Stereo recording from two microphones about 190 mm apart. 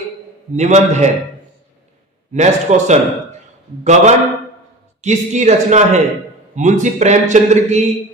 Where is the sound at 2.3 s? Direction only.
40° right (ahead or behind).